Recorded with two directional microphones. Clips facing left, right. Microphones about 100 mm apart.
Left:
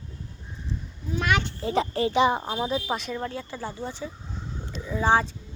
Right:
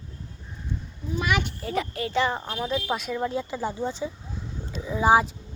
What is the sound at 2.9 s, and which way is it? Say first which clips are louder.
Speech: right 2 dB; centre (ahead or behind).